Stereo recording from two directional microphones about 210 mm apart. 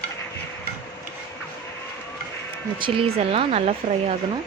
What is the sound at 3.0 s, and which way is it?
Speech, 30° right (ahead or behind).